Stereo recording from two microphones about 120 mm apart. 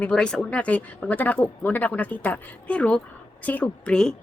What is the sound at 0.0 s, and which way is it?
A woman's voice, 5° left (ahead or behind).